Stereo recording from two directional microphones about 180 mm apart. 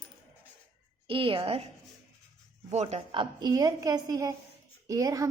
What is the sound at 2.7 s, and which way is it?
A woman's voice, 35° right (ahead or behind).